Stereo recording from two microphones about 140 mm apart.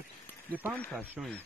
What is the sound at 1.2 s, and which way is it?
Speech, 5° right (ahead or behind).